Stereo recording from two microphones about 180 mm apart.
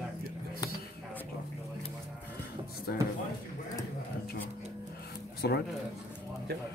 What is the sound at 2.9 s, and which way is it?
Speech, 55° left (ahead or behind).